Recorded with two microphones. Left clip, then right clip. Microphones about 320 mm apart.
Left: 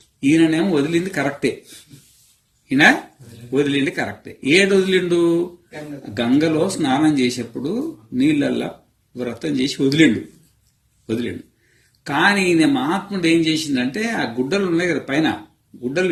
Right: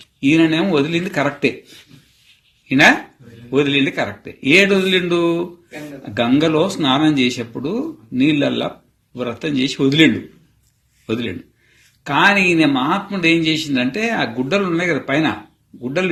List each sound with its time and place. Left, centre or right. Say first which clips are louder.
0.2 s a man's voice: right 1 dB; centre
3.5 s a man's voice: right 3 dB; centre